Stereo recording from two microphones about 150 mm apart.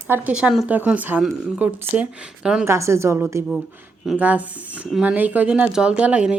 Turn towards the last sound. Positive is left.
turn(degrees=-10)  # may be behind; listen again after turning